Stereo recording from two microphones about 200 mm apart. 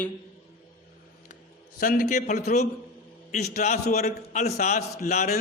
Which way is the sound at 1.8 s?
45° left (ahead or behind).